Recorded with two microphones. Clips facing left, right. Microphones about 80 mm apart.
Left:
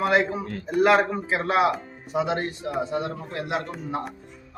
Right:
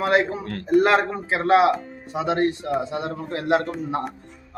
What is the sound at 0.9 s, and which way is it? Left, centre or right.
Speech, right.